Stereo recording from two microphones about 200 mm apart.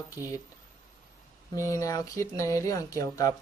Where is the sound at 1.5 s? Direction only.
15° left (ahead or behind).